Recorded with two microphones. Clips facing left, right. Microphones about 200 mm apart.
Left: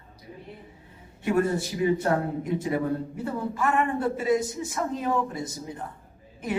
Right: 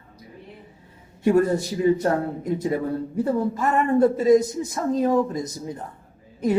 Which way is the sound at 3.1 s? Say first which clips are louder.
Right 7 dB; 40° right (ahead or behind).